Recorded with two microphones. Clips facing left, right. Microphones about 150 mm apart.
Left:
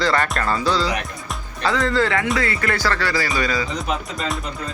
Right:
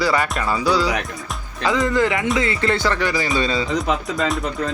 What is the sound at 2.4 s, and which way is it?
Music, 20° right (ahead or behind).